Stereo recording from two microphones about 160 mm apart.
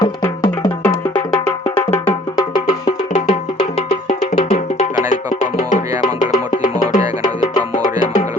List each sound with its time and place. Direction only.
0.0 s music: 25° left (ahead or behind)
1.6 s music: 40° left (ahead or behind)
3.2 s music: 45° left (ahead or behind)